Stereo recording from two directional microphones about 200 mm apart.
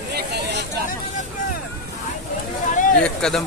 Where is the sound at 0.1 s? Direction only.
55° right (ahead or behind).